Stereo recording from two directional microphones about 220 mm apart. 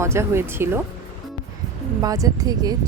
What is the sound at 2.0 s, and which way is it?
Speech, 15° right (ahead or behind).